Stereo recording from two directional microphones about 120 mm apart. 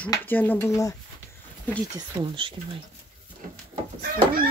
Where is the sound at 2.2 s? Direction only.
35° right (ahead or behind).